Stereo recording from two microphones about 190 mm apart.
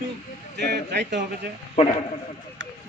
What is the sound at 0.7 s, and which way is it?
Speech, 65° right (ahead or behind).